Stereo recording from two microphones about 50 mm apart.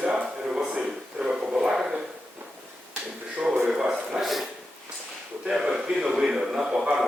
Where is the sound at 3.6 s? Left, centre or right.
Centre.